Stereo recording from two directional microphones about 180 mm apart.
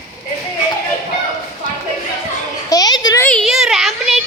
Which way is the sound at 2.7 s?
20° left (ahead or behind).